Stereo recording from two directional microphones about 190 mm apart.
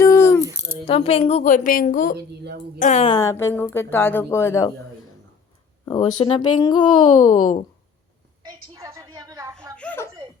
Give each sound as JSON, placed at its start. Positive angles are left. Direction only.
{"t": 0.0, "sound": "coin", "side_deg": 15}
{"t": 0.9, "sound": "a woman's voice", "side_deg": 30}
{"t": 2.1, "sound": "speech", "side_deg": -60}
{"t": 2.7, "sound": "a woman's voice", "side_deg": 40}
{"t": 3.1, "sound": "speech", "side_deg": 20}
{"t": 5.8, "sound": "speech", "side_deg": 20}
{"t": 8.4, "sound": "a sound", "side_deg": -15}
{"t": 9.7, "sound": "a sound", "side_deg": 10}